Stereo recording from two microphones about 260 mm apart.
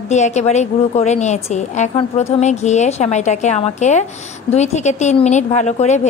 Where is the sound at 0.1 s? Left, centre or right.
Left.